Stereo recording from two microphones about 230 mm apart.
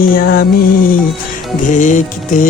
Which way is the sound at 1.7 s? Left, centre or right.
Left.